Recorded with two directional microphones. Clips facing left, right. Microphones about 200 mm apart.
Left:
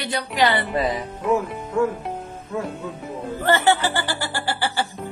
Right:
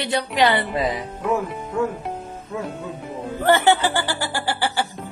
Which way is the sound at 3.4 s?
15° right (ahead or behind).